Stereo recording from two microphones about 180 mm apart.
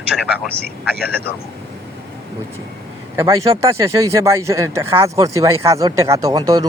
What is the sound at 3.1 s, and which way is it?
Speech, 20° right (ahead or behind).